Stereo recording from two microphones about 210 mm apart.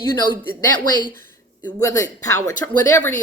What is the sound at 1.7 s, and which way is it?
A woman's voice, 15° left (ahead or behind).